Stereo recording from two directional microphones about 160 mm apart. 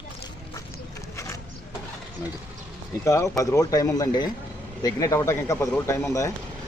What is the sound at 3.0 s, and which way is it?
Speech, 20° left (ahead or behind).